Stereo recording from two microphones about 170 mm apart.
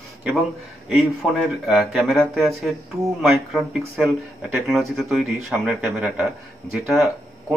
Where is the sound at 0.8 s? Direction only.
Centre (ahead or behind).